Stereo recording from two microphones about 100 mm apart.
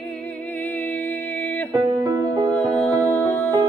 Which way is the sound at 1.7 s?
40° right (ahead or behind).